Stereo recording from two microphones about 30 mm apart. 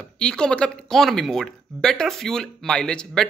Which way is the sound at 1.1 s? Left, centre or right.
Centre.